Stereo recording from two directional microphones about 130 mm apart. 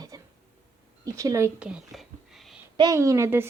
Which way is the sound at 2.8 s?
25° right (ahead or behind).